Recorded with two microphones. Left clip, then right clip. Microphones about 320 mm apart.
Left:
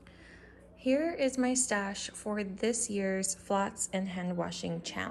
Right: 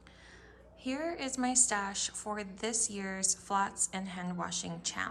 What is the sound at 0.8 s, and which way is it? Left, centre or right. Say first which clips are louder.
A woman's voice: left 7 dB; centre.